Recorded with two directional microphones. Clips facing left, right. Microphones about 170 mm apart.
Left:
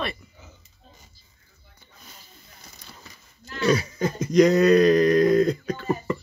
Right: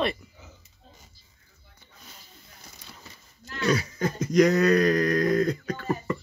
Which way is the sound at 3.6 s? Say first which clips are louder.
Left 3 dB; 25° left (ahead or behind).